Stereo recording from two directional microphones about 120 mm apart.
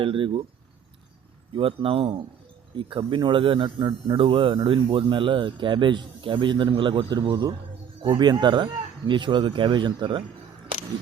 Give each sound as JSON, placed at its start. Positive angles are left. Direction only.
{"t": 0.0, "sound": "speech", "side_deg": -45}
{"t": 1.5, "sound": "speech", "side_deg": -45}